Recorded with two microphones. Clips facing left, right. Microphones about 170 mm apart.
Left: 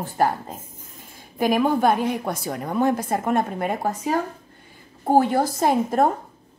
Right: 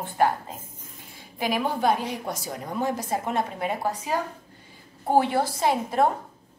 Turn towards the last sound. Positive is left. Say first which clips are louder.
# left 3 dB
turn(degrees=45)  # may be behind; listen again after turning